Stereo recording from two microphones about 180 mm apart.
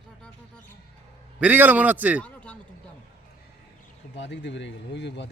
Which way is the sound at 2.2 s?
5° left (ahead or behind).